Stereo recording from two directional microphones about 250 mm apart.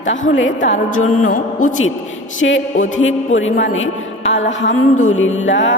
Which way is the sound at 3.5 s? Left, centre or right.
Left.